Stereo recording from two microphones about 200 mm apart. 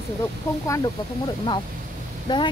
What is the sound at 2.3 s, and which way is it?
Speech, 20° left (ahead or behind).